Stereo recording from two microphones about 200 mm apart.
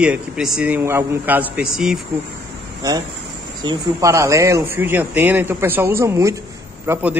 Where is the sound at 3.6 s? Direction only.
15° right (ahead or behind).